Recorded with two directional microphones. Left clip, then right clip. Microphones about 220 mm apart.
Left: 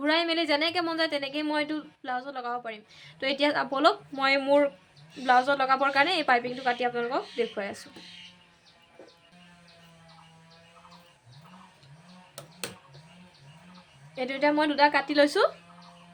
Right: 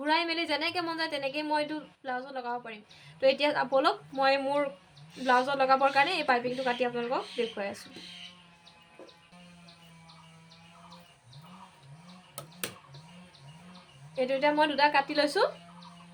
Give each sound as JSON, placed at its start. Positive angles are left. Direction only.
{"t": 0.0, "sound": "a woman's voice", "side_deg": 35}
{"t": 14.2, "sound": "a woman's voice", "side_deg": 35}